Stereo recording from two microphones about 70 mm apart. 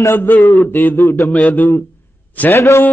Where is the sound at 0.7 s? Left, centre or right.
Left.